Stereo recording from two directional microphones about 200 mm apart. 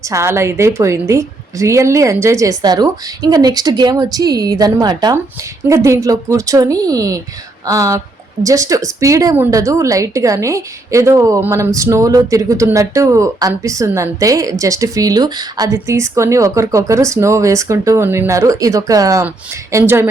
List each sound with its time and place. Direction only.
0.1 s a woman's voice: 15° right (ahead or behind)